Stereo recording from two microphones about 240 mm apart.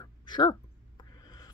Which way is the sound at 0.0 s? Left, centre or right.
Centre.